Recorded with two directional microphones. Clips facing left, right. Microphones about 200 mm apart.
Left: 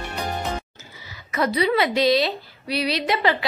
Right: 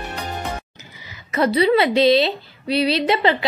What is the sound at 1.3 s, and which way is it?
A woman's voice, 30° right (ahead or behind).